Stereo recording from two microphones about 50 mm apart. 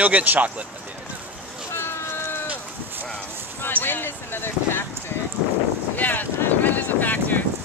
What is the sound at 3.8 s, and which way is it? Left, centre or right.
Speech, left.